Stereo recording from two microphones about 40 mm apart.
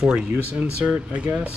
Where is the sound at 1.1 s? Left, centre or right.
Right.